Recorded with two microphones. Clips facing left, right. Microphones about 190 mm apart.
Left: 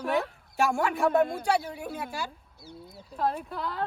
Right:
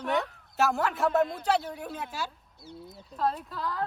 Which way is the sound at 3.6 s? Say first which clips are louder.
Right 1 dB; 25° left (ahead or behind).